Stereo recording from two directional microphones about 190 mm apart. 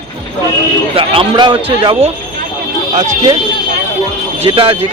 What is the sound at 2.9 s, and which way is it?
Speech, 40° right (ahead or behind).